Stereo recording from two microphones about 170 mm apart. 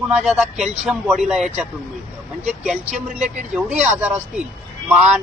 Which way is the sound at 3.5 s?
5° right (ahead or behind).